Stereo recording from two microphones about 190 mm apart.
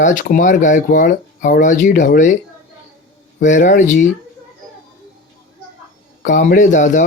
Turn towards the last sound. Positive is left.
turn(degrees=40)  # may be behind; listen again after turning